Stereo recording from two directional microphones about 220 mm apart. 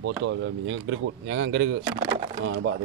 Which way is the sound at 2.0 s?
20° right (ahead or behind).